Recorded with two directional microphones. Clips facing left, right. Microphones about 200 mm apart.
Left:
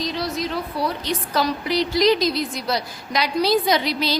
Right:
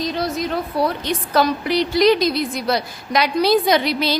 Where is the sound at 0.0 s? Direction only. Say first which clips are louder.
Right 3 dB; 50° right (ahead or behind).